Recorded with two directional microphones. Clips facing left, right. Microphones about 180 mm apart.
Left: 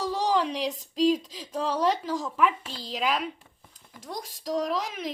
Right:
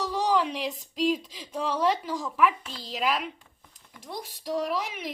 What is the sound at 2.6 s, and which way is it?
Speech, 40° left (ahead or behind).